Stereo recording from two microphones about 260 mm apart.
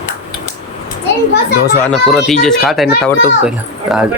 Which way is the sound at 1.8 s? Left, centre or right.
Centre.